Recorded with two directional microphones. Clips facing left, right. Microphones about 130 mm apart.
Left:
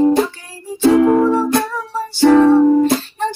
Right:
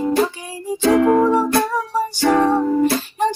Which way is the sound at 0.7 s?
15° right (ahead or behind).